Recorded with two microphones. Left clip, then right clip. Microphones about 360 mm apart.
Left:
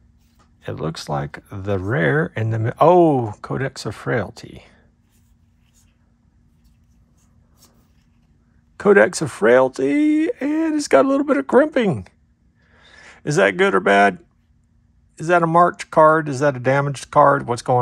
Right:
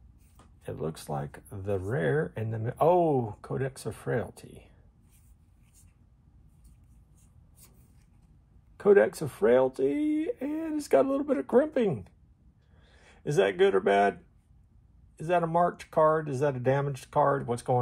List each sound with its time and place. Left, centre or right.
0.7 s speech: left
8.7 s speech: left
13.0 s speech: left
15.2 s speech: left